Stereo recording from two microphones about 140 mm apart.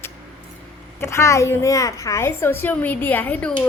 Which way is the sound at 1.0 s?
20° left (ahead or behind).